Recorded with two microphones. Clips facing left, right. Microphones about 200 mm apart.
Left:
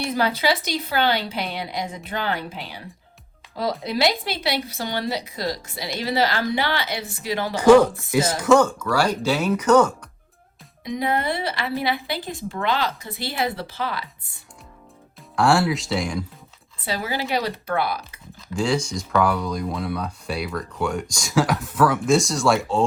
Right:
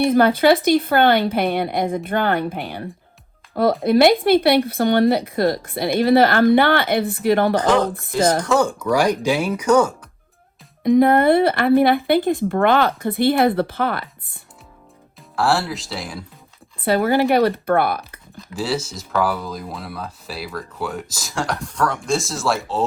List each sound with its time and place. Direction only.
0.0 s speech: 55° right (ahead or behind)
7.5 s speech: 10° left (ahead or behind)
8.5 s speech: 15° right (ahead or behind)
10.8 s speech: 55° right (ahead or behind)
15.4 s speech: centre (ahead or behind)
16.8 s speech: 55° right (ahead or behind)
18.3 s speech: 5° right (ahead or behind)